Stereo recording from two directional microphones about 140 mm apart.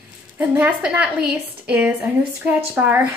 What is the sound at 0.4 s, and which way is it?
A woman's voice, 10° right (ahead or behind).